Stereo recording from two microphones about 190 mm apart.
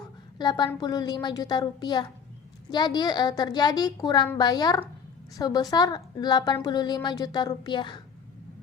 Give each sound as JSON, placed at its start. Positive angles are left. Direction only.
{"t": 0.3, "sound": "a woman's voice", "side_deg": 25}